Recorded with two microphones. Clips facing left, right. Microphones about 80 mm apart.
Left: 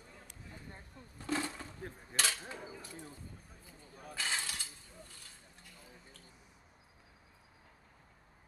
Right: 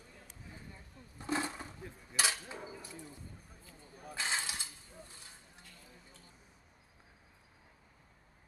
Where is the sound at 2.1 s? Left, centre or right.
Centre.